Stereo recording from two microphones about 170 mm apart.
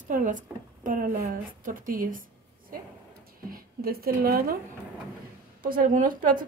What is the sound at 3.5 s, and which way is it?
A woman's voice, 60° right (ahead or behind).